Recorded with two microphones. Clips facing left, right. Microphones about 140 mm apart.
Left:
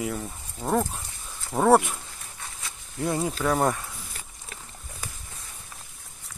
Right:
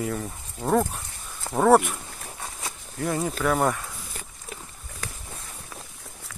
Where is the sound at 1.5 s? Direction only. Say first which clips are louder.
Right 1 dB; 80° right.